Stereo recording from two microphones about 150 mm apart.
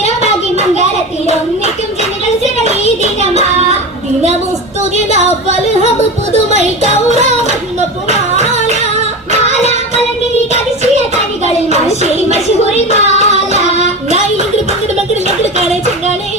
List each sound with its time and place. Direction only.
7.1 s music: 50° right (ahead or behind)
12.3 s a sound: 45° left (ahead or behind)
13.1 s child singing: 50° right (ahead or behind)